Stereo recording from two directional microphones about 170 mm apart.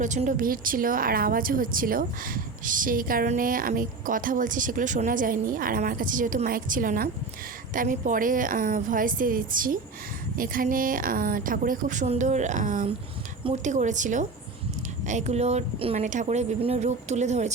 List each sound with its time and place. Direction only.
0.0 s a woman's voice: 45° right (ahead or behind)